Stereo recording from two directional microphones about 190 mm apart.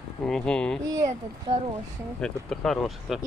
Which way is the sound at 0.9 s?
20° right (ahead or behind).